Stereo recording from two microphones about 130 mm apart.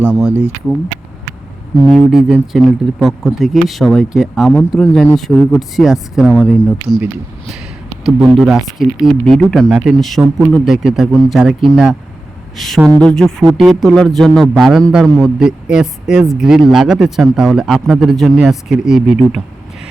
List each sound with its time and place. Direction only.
0.0 s speech: 5° right (ahead or behind)
1.9 s speech: 5° right (ahead or behind)
8.0 s speech: 5° right (ahead or behind)